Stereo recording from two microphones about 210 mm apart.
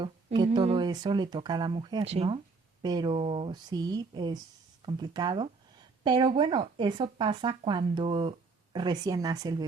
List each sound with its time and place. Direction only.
0.0 s speech: 25° right (ahead or behind)